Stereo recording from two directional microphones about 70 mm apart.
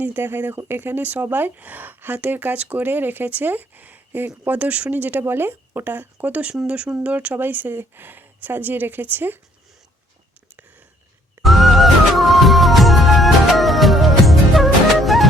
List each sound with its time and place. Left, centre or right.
0.0 s speech: right
11.4 s music: centre